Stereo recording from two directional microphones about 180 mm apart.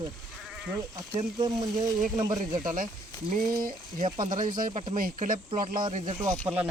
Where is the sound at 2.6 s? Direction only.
50° right (ahead or behind).